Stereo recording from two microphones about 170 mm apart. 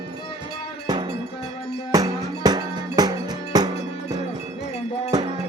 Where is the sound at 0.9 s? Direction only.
30° right (ahead or behind).